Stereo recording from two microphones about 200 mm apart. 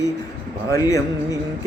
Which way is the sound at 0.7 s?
15° left (ahead or behind).